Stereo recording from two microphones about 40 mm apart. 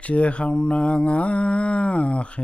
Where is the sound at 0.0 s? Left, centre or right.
Left.